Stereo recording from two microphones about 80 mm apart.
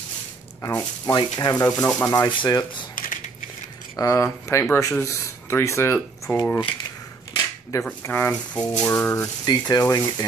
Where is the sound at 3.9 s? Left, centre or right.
Left.